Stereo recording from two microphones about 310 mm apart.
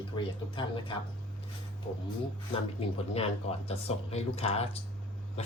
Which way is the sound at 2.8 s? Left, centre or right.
Centre.